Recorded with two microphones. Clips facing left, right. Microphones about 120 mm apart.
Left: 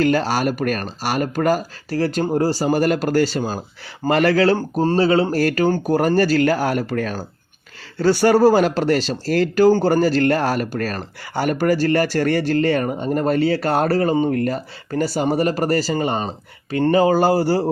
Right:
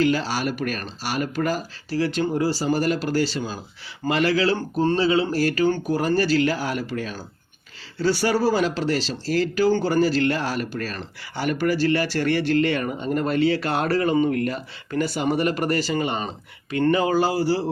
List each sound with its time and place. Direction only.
0.0 s speech: 50° left (ahead or behind)